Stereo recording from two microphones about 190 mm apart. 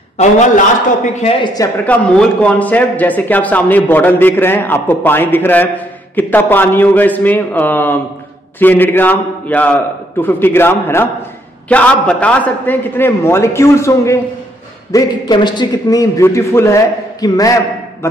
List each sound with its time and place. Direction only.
1.0 s a man's voice: 30° left (ahead or behind)
1.9 s a man's voice: 5° left (ahead or behind)